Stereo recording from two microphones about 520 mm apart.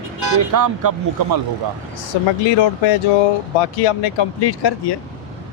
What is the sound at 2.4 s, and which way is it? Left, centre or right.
Speech, left.